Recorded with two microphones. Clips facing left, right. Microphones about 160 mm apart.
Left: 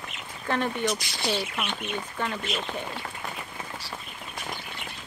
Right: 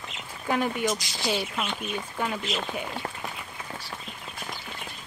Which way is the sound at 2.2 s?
10° right (ahead or behind).